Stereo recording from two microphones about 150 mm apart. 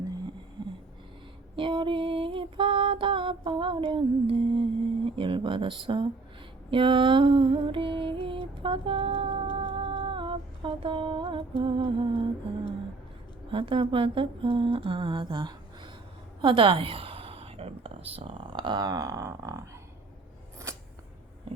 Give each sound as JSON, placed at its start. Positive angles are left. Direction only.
{"t": 1.5, "sound": "female singing", "side_deg": -35}
{"t": 5.0, "sound": "speech", "side_deg": -35}
{"t": 6.7, "sound": "female singing", "side_deg": -35}
{"t": 13.5, "sound": "speech", "side_deg": -35}
{"t": 14.8, "sound": "a sound", "side_deg": -35}